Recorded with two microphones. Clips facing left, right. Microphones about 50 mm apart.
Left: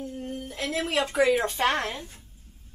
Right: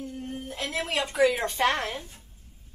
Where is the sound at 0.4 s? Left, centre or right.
Centre.